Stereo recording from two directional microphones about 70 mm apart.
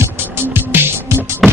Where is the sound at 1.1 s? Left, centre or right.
Right.